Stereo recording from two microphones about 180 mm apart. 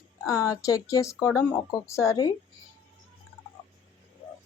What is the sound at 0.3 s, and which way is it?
Speech, 20° left (ahead or behind).